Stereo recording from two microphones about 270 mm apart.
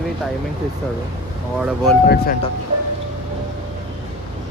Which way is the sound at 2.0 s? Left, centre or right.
Left.